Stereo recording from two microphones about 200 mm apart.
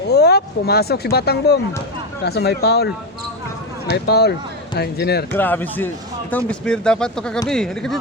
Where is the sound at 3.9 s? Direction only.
55° left (ahead or behind).